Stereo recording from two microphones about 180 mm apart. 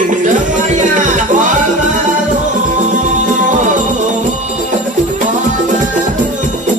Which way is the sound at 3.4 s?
45° right (ahead or behind).